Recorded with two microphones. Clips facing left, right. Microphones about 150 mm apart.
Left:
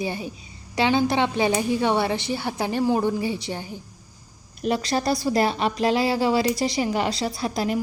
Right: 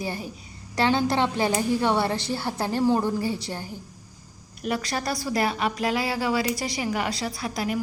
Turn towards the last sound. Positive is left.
turn(degrees=30)  # may be behind; listen again after turning